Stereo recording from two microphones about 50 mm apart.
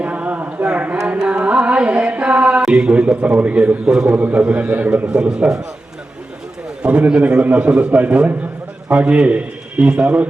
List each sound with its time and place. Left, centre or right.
0.0 s a sound: right
1.2 s music: centre
2.6 s a sound: centre
3.2 s a man's voice: right
3.8 s a man's voice: centre
4.1 s a man's voice: right
5.0 s a man's voice: centre
6.8 s a man's voice: centre
7.2 s a man's voice: right